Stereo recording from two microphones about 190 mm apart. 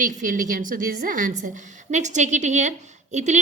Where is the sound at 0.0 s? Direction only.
45° right (ahead or behind).